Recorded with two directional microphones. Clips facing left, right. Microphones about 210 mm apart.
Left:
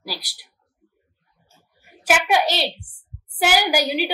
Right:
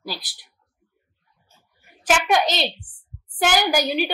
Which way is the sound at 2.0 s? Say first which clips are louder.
Even; 10° left (ahead or behind).